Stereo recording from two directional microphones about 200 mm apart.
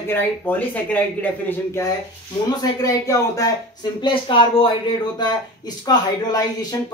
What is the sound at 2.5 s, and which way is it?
Speech, 15° left (ahead or behind).